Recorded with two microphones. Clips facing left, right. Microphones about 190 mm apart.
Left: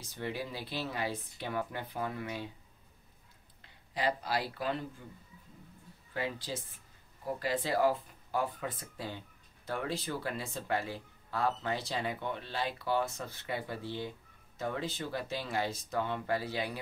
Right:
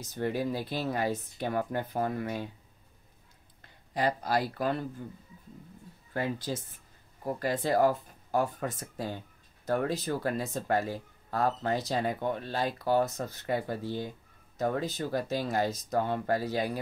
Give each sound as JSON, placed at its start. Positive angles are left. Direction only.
{"t": 0.0, "sound": "speech", "side_deg": -45}
{"t": 3.6, "sound": "speech", "side_deg": -45}
{"t": 6.1, "sound": "speech", "side_deg": -45}